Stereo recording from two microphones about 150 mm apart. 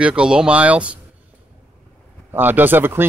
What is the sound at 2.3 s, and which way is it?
Speech, 15° right (ahead or behind).